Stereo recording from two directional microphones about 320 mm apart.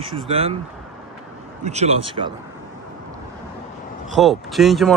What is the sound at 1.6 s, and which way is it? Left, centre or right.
Speech, right.